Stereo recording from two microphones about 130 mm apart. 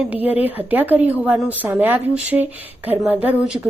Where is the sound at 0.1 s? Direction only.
15° right (ahead or behind).